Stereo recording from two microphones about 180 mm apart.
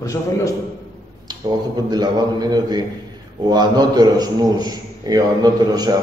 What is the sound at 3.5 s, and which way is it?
A man's voice, 20° right (ahead or behind).